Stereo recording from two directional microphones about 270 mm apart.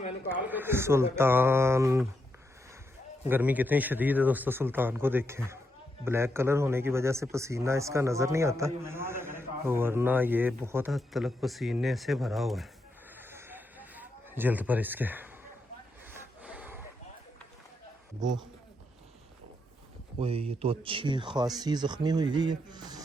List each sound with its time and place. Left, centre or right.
0.3 s speech: centre
3.2 s speech: centre
13.1 s a sound: centre
20.1 s speech: right